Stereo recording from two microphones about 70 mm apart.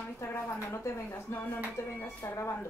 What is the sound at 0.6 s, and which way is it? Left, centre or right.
Speech, left.